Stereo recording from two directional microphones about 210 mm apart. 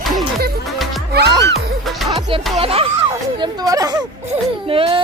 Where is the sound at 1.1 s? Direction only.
50° right (ahead or behind).